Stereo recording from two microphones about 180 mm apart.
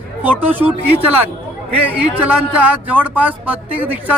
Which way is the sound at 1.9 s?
10° right (ahead or behind).